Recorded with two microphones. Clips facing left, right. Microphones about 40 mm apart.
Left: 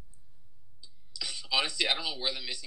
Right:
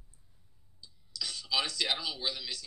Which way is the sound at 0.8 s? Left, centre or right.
Centre.